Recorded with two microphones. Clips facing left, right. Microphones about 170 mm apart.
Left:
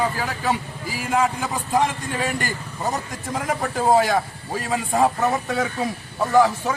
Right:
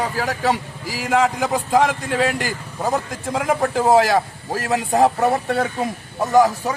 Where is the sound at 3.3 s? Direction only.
75° right (ahead or behind).